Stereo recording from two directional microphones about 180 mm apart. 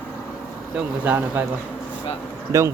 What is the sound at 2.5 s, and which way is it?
Speech, 15° right (ahead or behind).